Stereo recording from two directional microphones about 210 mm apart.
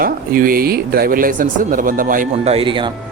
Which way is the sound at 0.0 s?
40° right (ahead or behind).